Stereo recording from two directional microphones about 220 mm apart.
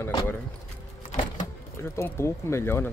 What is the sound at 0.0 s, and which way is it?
Speech, 10° left (ahead or behind).